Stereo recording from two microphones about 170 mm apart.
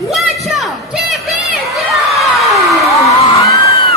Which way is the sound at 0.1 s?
Centre (ahead or behind).